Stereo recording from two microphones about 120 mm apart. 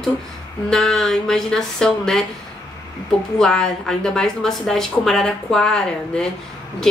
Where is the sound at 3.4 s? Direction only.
5° left (ahead or behind).